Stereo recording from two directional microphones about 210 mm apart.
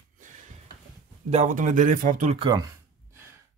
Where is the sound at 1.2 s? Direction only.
35° right (ahead or behind).